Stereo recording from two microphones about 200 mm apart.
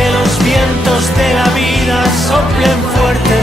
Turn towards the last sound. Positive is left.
turn(degrees=0)  # may be behind; listen again after turning